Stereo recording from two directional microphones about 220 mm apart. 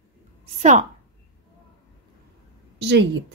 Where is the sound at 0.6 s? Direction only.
35° right (ahead or behind).